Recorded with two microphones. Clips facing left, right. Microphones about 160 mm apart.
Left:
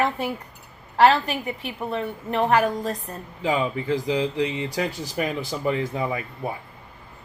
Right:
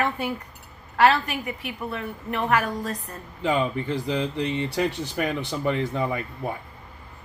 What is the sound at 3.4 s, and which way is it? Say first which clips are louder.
Speech: left 1 dB; 10° left (ahead or behind).